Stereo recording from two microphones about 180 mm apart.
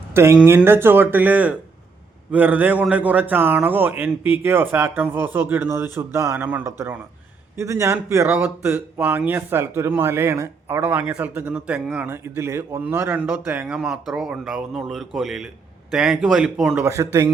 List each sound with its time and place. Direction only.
0.1 s speech: 15° right (ahead or behind)
16.8 s speech: 15° right (ahead or behind)